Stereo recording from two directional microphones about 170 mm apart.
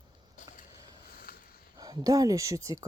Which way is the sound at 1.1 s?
60° left (ahead or behind).